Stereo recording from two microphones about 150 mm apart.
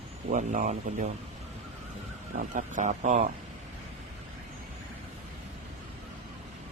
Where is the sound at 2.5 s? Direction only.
55° right (ahead or behind).